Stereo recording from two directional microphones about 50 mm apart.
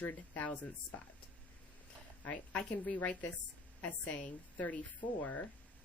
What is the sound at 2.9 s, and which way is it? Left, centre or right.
Speech, left.